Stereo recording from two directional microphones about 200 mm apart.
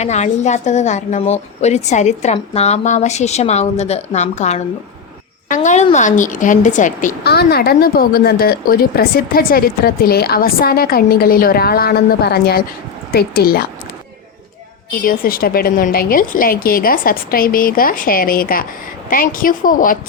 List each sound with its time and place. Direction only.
0.0 s a woman's voice: 35° left (ahead or behind); by 13.7 s 50° left (ahead or behind)
14.9 s a woman's voice: 45° left (ahead or behind)